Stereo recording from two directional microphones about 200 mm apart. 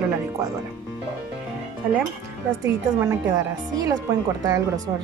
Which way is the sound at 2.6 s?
15° right (ahead or behind).